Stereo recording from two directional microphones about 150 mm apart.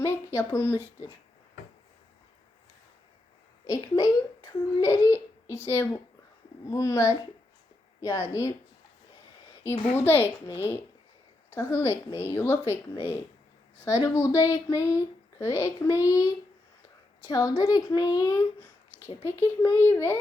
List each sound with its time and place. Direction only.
0.3 s a child's voice: 20° left (ahead or behind)
3.7 s speech: 25° left (ahead or behind)
9.9 s a child's voice: 15° left (ahead or behind)
11.5 s a child's voice: 20° left (ahead or behind)